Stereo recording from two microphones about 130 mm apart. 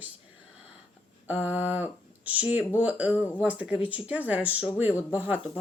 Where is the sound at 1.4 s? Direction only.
10° right (ahead or behind).